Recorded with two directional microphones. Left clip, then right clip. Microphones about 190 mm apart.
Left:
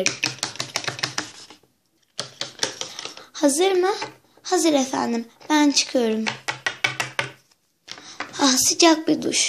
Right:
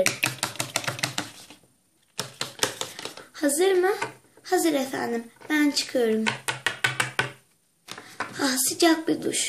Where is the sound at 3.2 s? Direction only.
30° left (ahead or behind).